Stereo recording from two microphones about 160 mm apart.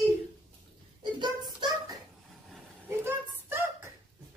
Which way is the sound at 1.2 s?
25° right (ahead or behind).